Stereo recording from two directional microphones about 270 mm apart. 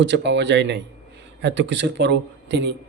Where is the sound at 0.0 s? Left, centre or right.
Right.